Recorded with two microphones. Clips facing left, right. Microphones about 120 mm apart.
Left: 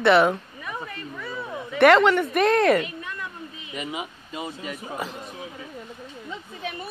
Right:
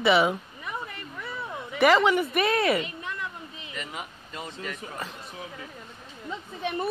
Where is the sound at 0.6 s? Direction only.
20° right (ahead or behind).